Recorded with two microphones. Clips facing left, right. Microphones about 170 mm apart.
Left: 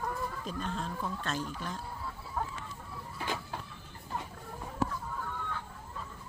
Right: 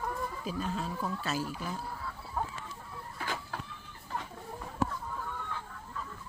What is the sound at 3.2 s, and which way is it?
Vehicle, 20° left (ahead or behind).